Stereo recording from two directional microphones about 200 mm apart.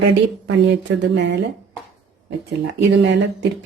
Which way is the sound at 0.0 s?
60° right (ahead or behind).